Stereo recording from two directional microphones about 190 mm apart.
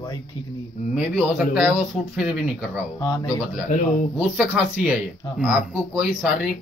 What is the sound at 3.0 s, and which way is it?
Speech, 20° left (ahead or behind).